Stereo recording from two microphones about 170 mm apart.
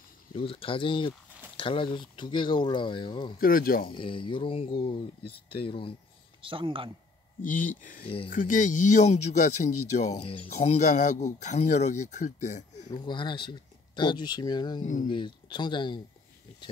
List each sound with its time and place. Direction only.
0.3 s speech: 30° left (ahead or behind)
3.3 s speech: 60° left (ahead or behind)
3.8 s speech: 30° left (ahead or behind)
6.4 s speech: 30° right (ahead or behind)
7.4 s speech: 50° left (ahead or behind)
12.9 s speech: 25° left (ahead or behind)